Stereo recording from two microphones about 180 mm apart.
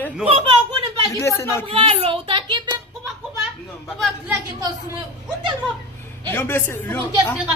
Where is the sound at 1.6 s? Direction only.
30° right (ahead or behind).